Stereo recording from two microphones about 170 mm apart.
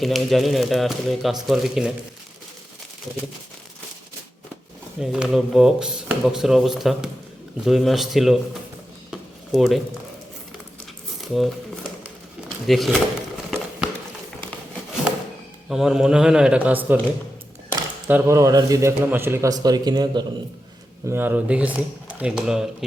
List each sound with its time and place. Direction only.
0.0 s speech: centre (ahead or behind)
4.9 s speech: 5° right (ahead or behind)
9.0 s a sound: centre (ahead or behind)
11.3 s speech: centre (ahead or behind)
13.5 s a sound: 5° right (ahead or behind)
15.7 s speech: 5° right (ahead or behind)
18.1 s a man's voice: 15° right (ahead or behind)
21.1 s speech: 10° right (ahead or behind)